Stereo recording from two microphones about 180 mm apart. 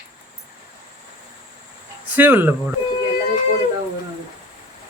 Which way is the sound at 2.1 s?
10° right (ahead or behind).